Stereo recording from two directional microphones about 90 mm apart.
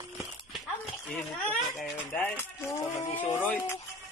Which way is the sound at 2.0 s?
20° left (ahead or behind).